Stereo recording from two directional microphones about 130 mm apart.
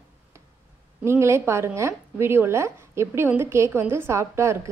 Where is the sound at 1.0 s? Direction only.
20° right (ahead or behind).